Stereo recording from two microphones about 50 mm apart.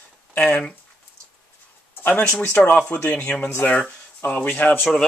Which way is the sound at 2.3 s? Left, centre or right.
Left.